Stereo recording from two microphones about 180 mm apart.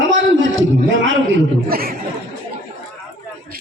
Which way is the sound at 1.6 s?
55° right (ahead or behind).